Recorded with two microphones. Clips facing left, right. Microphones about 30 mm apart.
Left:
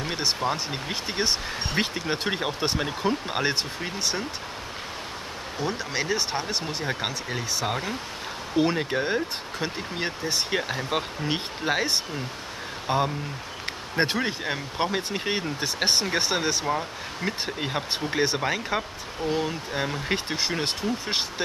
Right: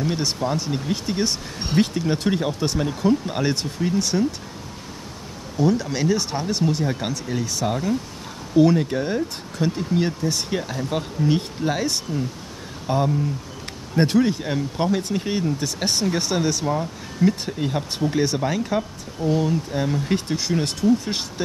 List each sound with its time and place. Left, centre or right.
0.0 s speech: left
5.6 s speech: centre